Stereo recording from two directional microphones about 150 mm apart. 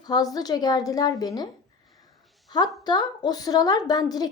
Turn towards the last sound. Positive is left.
turn(degrees=25)  # may be behind; listen again after turning